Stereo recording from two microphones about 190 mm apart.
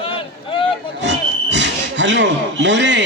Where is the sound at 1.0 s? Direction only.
70° right (ahead or behind).